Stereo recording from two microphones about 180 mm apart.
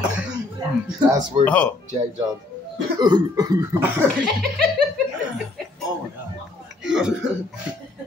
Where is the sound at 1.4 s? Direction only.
10° left (ahead or behind).